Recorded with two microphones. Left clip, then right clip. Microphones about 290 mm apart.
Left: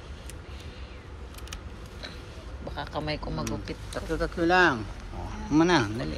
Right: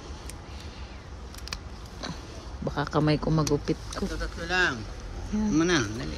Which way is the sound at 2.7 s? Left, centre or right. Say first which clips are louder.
Right 6 dB; right.